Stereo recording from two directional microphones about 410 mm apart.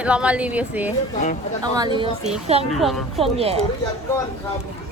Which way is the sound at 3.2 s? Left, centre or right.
Centre.